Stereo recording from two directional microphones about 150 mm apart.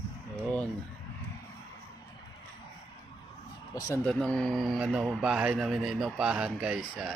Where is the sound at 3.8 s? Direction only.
20° left (ahead or behind).